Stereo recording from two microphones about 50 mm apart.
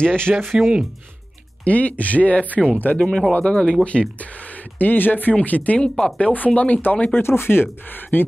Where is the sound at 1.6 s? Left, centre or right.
Left.